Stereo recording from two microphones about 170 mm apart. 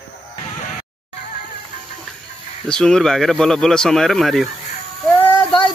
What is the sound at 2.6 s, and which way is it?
Speech, 5° left (ahead or behind).